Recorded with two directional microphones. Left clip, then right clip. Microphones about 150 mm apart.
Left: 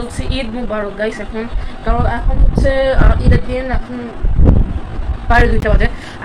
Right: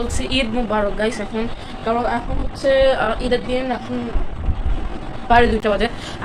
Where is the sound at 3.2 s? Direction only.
Centre (ahead or behind).